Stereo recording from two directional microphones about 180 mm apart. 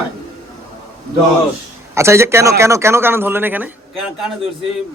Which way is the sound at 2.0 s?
15° right (ahead or behind).